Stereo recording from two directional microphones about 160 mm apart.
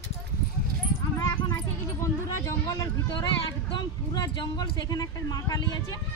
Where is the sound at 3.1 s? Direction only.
30° left (ahead or behind).